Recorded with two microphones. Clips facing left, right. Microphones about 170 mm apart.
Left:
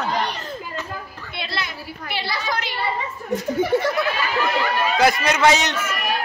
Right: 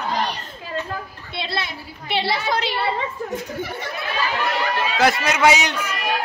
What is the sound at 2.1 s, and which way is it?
Speech, 25° right (ahead or behind).